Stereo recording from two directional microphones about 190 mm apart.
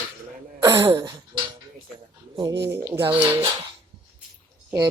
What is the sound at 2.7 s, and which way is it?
Dishes, 15° right (ahead or behind).